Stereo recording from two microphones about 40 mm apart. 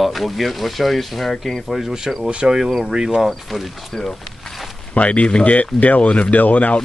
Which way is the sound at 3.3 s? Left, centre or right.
Centre.